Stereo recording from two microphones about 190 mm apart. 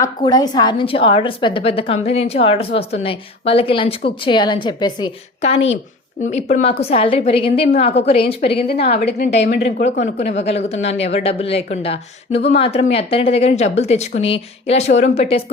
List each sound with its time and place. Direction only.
0.3 s a woman's voice: 20° left (ahead or behind)
8.6 s a woman's voice: 55° left (ahead or behind)
10.2 s speech: 35° left (ahead or behind)